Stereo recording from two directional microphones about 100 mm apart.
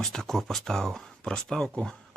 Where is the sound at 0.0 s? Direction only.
5° left (ahead or behind).